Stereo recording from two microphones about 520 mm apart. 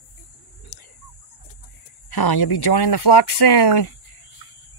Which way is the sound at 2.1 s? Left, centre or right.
Left.